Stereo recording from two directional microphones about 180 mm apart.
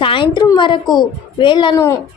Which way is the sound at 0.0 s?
30° left (ahead or behind).